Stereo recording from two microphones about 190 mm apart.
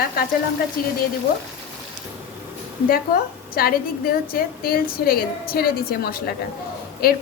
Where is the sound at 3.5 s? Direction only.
50° left (ahead or behind).